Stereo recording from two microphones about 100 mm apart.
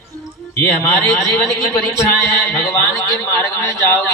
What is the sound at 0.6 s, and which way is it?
A man's voice, 30° left (ahead or behind).